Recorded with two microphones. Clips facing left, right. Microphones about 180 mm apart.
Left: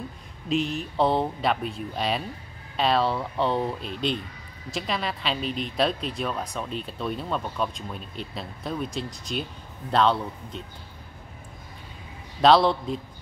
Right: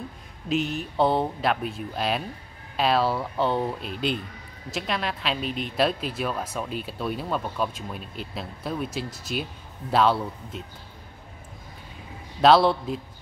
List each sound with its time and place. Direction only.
0.5 s a woman's voice: centre (ahead or behind)
12.4 s a woman's voice: centre (ahead or behind)